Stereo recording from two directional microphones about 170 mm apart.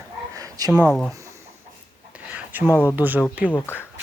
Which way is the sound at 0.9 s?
5° left (ahead or behind).